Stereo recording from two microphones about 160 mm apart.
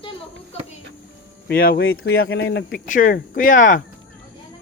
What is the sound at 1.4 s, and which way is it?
Speech, 70° left (ahead or behind).